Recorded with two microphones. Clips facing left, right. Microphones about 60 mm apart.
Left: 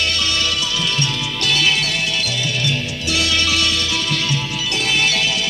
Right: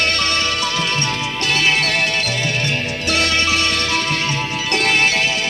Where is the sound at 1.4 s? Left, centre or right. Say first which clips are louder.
Right 1 dB; right.